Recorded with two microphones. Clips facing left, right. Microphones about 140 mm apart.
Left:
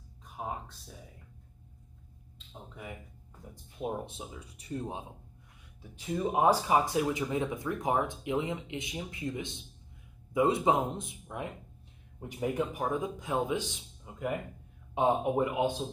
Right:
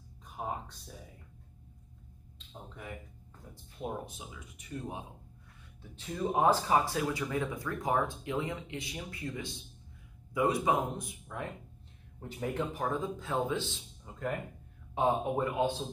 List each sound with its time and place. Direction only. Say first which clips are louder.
0.4 s a sound: even; centre (ahead or behind)
2.3 s speech: left 1 dB; 5° left (ahead or behind)
3.7 s speech: left 3 dB; 20° left (ahead or behind)
4.2 s speech: left 4 dB; 35° left (ahead or behind)
5.8 s a man's voice: left 3 dB; 10° left (ahead or behind)